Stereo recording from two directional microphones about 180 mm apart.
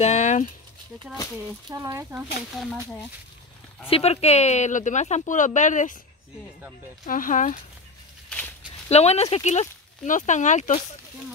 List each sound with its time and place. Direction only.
0.0 s speech: 40° left (ahead or behind)
1.7 s speech: 15° right (ahead or behind)
2.5 s speech: centre (ahead or behind)
3.9 s speech: 35° left (ahead or behind)
7.1 s speech: 50° left (ahead or behind)
8.8 s speech: 35° left (ahead or behind)